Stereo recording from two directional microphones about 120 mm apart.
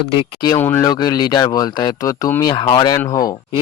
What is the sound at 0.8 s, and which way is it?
Speech, 35° left (ahead or behind).